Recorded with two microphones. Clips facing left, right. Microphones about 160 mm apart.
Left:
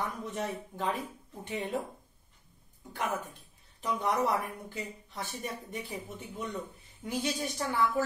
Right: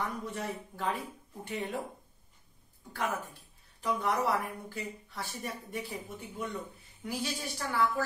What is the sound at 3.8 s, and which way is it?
Speech, 20° left (ahead or behind).